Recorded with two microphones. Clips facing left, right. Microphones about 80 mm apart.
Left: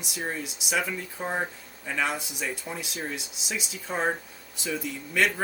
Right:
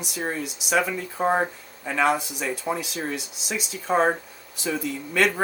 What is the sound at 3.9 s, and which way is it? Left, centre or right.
Speech, right.